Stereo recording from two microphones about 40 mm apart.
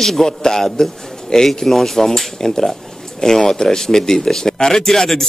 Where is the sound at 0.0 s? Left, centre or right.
Centre.